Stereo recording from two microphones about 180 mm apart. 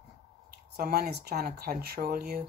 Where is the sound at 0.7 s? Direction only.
55° right (ahead or behind).